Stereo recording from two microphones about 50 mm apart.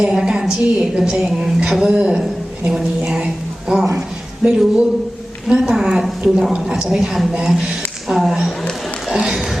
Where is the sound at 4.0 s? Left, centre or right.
Centre.